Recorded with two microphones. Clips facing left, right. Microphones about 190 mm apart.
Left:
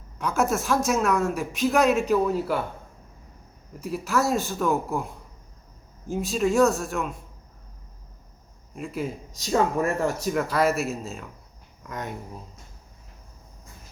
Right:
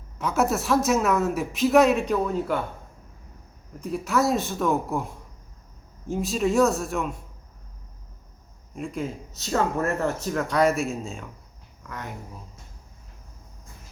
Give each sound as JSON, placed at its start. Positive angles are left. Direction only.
{"t": 0.2, "sound": "speech", "side_deg": 0}
{"t": 3.8, "sound": "speech", "side_deg": 5}
{"t": 8.7, "sound": "speech", "side_deg": 5}
{"t": 11.8, "sound": "speech", "side_deg": 20}